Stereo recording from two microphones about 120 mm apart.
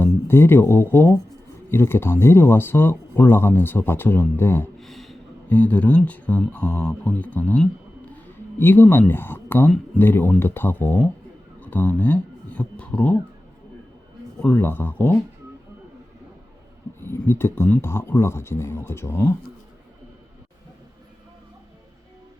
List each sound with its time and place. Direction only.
0.0 s speech: 20° left (ahead or behind)
4.8 s a sound: centre (ahead or behind)
5.5 s speech: 15° left (ahead or behind)
14.4 s speech: 15° left (ahead or behind)
17.0 s speech: 20° left (ahead or behind)